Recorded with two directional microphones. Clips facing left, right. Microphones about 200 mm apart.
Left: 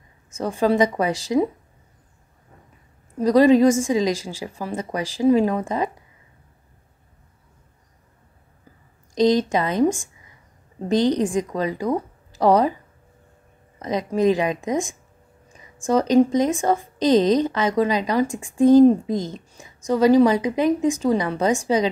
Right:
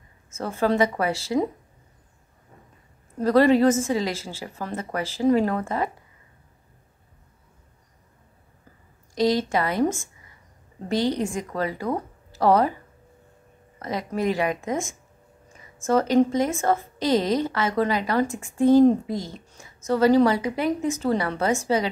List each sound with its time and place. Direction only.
0.3 s speech: 15° left (ahead or behind)
3.2 s speech: 15° left (ahead or behind)
9.1 s a woman's voice: 20° left (ahead or behind)
13.7 s speech: 20° left (ahead or behind)